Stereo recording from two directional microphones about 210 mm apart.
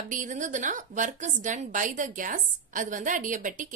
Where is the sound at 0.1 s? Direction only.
40° right (ahead or behind).